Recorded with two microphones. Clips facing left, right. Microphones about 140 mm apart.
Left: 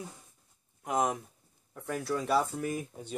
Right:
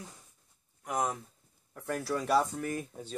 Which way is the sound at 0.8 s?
20° left (ahead or behind).